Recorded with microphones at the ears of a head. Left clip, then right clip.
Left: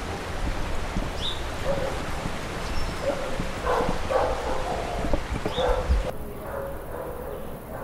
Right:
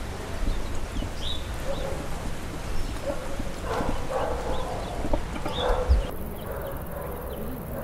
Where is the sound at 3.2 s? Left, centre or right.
Left.